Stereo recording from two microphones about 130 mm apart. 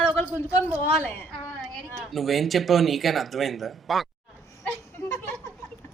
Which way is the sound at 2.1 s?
Centre (ahead or behind).